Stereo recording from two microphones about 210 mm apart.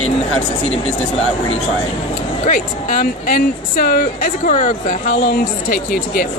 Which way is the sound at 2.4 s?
40° left (ahead or behind).